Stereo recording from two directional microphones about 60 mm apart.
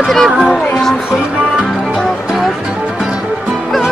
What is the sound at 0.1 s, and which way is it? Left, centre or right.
Speech, centre.